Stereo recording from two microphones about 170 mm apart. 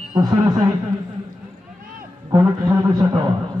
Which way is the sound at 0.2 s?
25° right (ahead or behind).